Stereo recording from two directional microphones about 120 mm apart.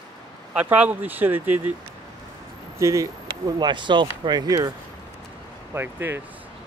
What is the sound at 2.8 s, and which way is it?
Speech, 25° right (ahead or behind).